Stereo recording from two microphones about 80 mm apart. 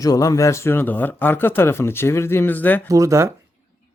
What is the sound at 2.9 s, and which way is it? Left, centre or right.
Speech, right.